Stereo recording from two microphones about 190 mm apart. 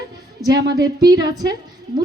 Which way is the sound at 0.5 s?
20° right (ahead or behind).